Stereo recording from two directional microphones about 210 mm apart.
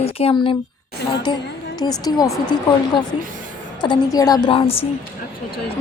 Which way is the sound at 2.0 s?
15° left (ahead or behind).